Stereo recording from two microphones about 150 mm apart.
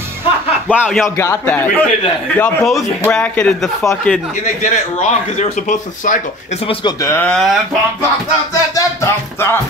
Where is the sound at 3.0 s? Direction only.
10° left (ahead or behind).